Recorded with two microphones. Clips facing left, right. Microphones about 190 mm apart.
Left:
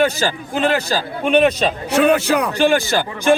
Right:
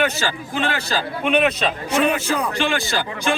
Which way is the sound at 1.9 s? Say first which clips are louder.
Left 6 dB; 75° left (ahead or behind).